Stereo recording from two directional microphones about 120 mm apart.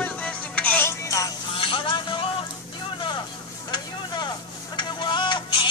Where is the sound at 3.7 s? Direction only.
35° left (ahead or behind).